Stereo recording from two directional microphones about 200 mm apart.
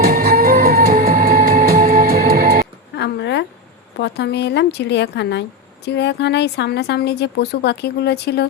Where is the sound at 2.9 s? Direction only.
60° left (ahead or behind).